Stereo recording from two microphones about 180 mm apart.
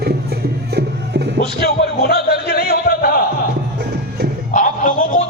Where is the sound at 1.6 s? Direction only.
65° left (ahead or behind).